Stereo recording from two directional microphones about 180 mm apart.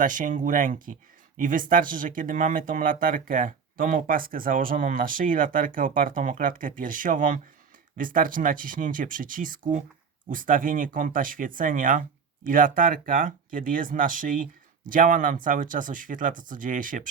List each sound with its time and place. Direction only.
0.0 s speech: 45° right (ahead or behind)